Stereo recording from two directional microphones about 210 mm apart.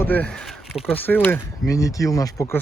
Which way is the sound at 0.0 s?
5° left (ahead or behind).